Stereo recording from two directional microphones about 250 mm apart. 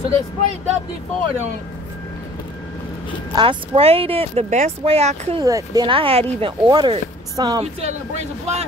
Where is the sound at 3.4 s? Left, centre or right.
Right.